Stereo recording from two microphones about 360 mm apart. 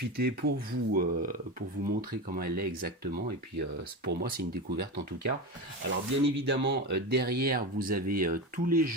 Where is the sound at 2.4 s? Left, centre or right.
Right.